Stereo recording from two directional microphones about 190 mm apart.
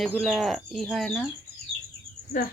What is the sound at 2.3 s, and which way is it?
Speech, 45° left (ahead or behind).